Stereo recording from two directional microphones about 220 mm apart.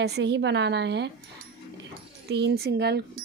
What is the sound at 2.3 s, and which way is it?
Speech, 50° right (ahead or behind).